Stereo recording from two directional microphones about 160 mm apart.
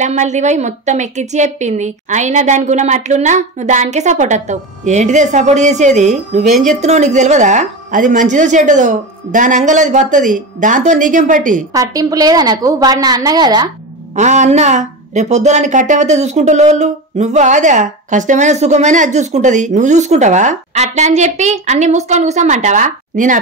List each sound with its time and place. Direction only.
0.0 s a woman's voice: 45° right (ahead or behind)
11.7 s a woman's voice: 20° right (ahead or behind)
14.1 s a woman's voice: 50° right (ahead or behind)